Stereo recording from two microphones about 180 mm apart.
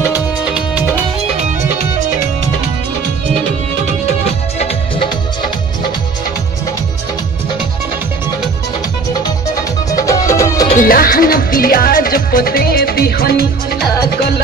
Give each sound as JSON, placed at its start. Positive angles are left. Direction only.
{"t": 0.5, "sound": "music", "side_deg": -5}
{"t": 9.8, "sound": "music", "side_deg": 20}
{"t": 10.8, "sound": "music", "side_deg": 50}